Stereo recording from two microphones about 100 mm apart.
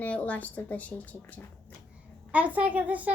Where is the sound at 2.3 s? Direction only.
15° right (ahead or behind).